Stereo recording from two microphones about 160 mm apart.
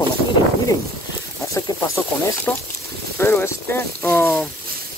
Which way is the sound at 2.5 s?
10° left (ahead or behind).